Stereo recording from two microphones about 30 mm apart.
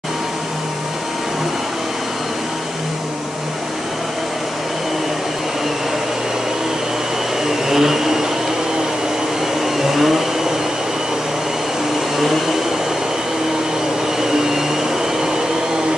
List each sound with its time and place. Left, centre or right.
7.4 s vacuum cleaner: centre
9.8 s vacuum cleaner: centre
14.2 s vacuum cleaner: centre